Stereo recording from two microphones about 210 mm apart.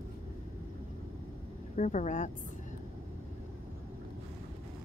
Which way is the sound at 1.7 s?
35° left (ahead or behind).